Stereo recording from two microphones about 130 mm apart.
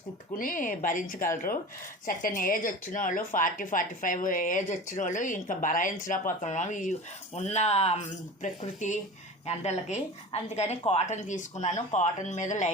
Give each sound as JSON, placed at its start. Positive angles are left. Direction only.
{"t": 0.3, "sound": "a woman's voice", "side_deg": 90}
{"t": 7.3, "sound": "a woman's voice", "side_deg": 60}
{"t": 9.5, "sound": "a woman's voice", "side_deg": 55}